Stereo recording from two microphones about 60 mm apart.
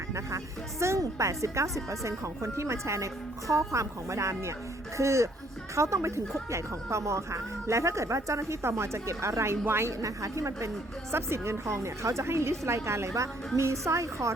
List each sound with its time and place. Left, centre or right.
0.1 s speech: right
10.0 s speech: right
11.1 s a woman's voice: right